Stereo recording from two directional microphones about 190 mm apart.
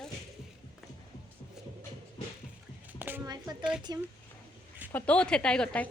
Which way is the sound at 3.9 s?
20° right (ahead or behind).